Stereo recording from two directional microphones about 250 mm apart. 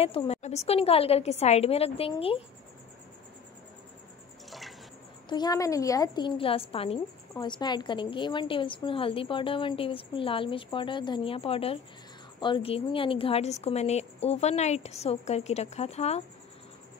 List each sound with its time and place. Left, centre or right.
0.0 s a woman's voice: left
4.5 s bathtub: centre
5.3 s a woman's voice: centre